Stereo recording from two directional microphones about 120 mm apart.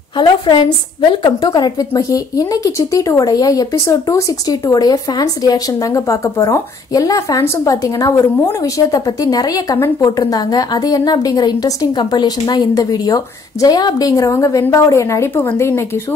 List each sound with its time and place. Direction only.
0.1 s a woman's voice: 40° left (ahead or behind); by 16.0 s 20° left (ahead or behind)